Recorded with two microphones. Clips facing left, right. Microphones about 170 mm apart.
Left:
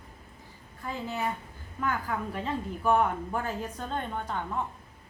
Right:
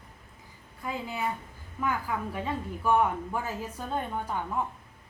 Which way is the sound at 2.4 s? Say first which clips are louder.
Even; 5° right (ahead or behind).